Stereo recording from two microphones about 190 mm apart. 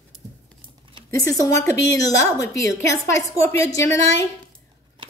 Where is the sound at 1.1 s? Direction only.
15° left (ahead or behind).